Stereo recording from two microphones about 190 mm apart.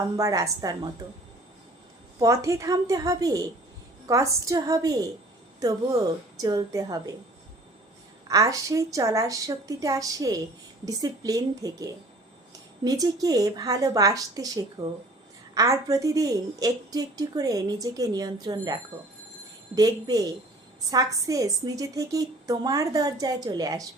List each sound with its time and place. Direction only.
0.2 s a woman's voice: 15° right (ahead or behind)
2.1 s a woman's voice: 15° right (ahead or behind)
8.3 s a woman's voice: 15° right (ahead or behind)